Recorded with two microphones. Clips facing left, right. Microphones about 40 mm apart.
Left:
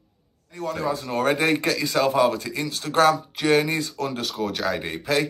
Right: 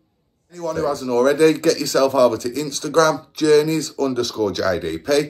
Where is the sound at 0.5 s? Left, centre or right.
Left.